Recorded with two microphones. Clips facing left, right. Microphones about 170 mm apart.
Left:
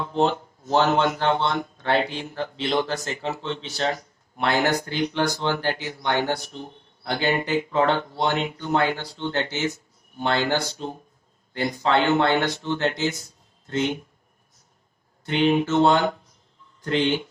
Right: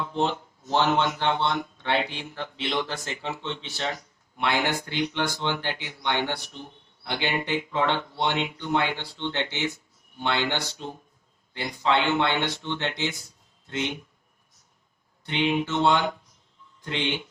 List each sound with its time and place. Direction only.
0.1 s speech: 40° left (ahead or behind)
15.3 s speech: 40° left (ahead or behind)